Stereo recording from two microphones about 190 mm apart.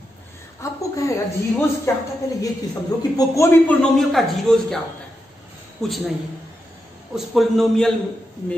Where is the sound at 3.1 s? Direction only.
15° left (ahead or behind).